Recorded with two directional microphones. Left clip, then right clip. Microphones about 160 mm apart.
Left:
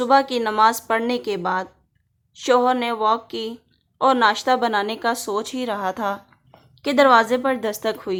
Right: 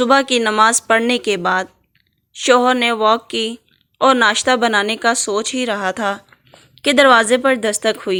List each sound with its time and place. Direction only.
0.0 s a woman's voice: 20° right (ahead or behind)